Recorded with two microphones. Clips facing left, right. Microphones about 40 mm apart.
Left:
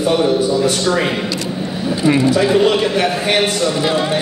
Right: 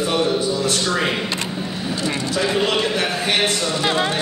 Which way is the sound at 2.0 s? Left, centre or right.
Centre.